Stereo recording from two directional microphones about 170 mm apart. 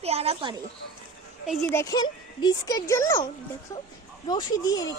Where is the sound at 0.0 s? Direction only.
35° right (ahead or behind).